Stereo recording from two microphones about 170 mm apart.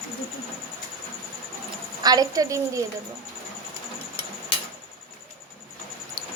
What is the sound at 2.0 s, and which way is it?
Speech, 20° right (ahead or behind).